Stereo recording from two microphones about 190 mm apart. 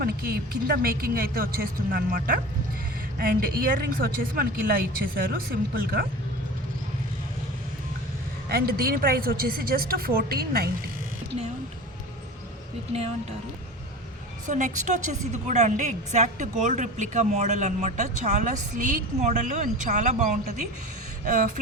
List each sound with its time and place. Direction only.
0.0 s speech: 50° right (ahead or behind)
8.4 s speech: 55° right (ahead or behind)
14.4 s a woman's voice: 40° right (ahead or behind)